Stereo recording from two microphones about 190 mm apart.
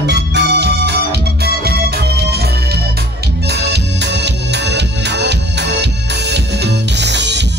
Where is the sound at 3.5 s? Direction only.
60° right (ahead or behind).